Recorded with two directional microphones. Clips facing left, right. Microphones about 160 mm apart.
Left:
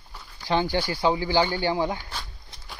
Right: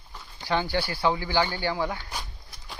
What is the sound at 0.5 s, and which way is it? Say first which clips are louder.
Speech: left 2 dB; 20° left (ahead or behind).